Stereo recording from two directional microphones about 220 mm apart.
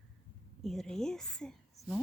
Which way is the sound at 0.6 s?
Centre (ahead or behind).